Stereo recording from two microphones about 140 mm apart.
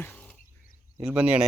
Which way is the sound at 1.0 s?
10° right (ahead or behind).